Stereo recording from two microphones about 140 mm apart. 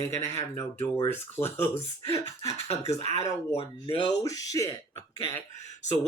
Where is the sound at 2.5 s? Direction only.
50° left (ahead or behind).